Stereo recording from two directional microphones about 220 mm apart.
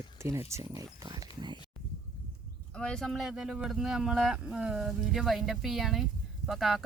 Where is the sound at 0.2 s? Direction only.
10° right (ahead or behind).